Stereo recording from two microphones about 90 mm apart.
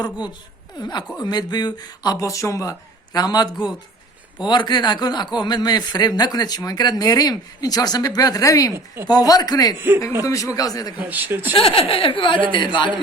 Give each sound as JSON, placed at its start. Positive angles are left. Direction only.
{"t": 0.8, "sound": "speech", "side_deg": 50}
{"t": 10.9, "sound": "a man's voice", "side_deg": -20}
{"t": 11.5, "sound": "speech", "side_deg": 90}